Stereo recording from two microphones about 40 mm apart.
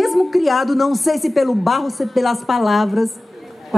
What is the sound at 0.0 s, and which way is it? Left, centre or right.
A woman's voice, centre.